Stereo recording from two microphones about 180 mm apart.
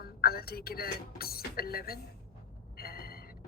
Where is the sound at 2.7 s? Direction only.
55° left (ahead or behind).